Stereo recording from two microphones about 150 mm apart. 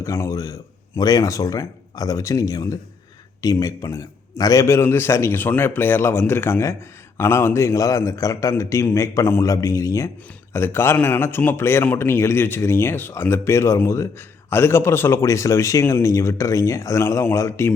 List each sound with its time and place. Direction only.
0.0 s a man's voice: 20° left (ahead or behind)